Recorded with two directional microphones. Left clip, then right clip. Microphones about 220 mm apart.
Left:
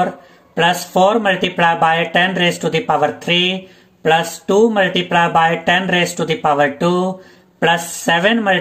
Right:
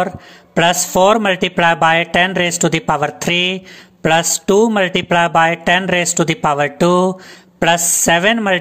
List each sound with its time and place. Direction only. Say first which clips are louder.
0.6 s speech: right 1 dB; 40° right (ahead or behind)